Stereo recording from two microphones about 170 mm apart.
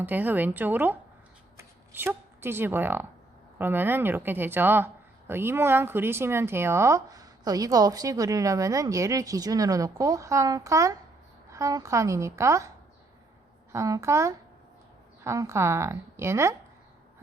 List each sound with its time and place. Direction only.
0.0 s a woman's voice: 10° right (ahead or behind)
13.7 s a woman's voice: 20° right (ahead or behind)